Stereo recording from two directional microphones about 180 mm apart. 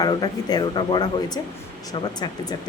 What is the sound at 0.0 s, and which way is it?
Speech, 20° left (ahead or behind).